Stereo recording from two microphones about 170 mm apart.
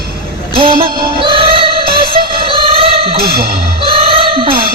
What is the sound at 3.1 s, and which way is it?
Speech, 65° right (ahead or behind).